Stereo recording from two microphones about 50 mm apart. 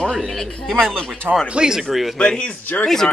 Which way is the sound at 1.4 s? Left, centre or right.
Centre.